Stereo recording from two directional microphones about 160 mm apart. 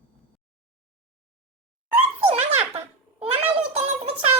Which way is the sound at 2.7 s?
40° right (ahead or behind).